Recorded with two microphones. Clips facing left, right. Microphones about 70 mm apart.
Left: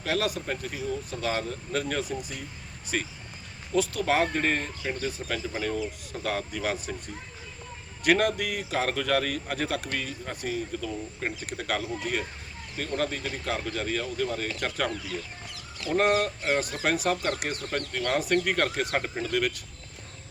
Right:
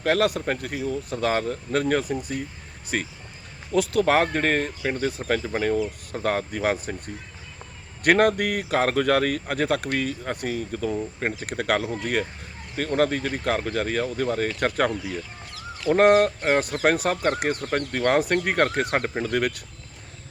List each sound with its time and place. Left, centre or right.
0.0 s speech: right
8.0 s speech: right